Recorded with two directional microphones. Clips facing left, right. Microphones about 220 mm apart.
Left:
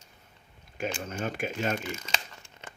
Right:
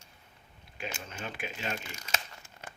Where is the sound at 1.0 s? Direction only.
45° left (ahead or behind).